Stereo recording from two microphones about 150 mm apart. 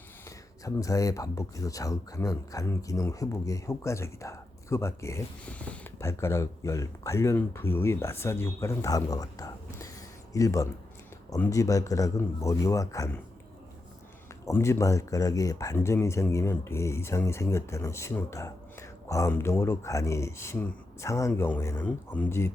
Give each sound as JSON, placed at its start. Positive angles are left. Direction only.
{"t": 0.3, "sound": "speech", "side_deg": 20}
{"t": 6.0, "sound": "speech", "side_deg": 20}
{"t": 14.4, "sound": "speech", "side_deg": 20}